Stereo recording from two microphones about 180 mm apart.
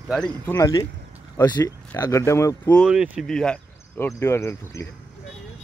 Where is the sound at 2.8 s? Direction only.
5° right (ahead or behind); by 4.8 s 15° left (ahead or behind).